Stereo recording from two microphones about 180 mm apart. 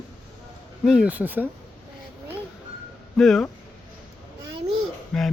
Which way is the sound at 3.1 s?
Centre (ahead or behind).